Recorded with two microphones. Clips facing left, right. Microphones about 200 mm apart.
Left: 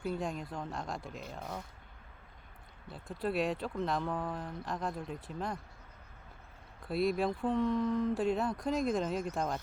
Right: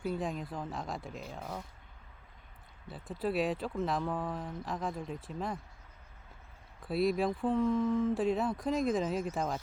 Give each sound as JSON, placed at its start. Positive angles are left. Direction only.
{"t": 0.0, "sound": "speech", "side_deg": 0}
{"t": 2.8, "sound": "speech", "side_deg": 0}
{"t": 6.8, "sound": "speech", "side_deg": 0}